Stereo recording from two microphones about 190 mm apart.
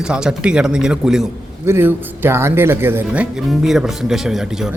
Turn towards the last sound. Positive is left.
turn(degrees=-5)  # may be behind; listen again after turning